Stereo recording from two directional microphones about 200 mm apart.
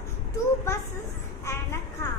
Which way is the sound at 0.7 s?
15° left (ahead or behind).